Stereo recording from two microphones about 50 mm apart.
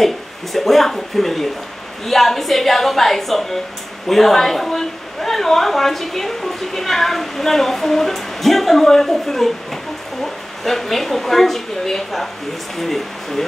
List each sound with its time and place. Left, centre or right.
0.0 s a woman's voice: centre
10.6 s a woman's voice: centre